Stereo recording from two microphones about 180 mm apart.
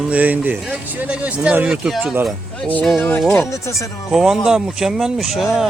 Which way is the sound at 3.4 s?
15° left (ahead or behind).